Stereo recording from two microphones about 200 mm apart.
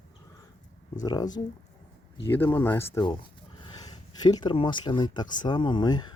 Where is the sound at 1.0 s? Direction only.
20° left (ahead or behind).